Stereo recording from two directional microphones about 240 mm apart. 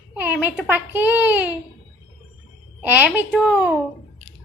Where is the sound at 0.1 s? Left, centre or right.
Centre.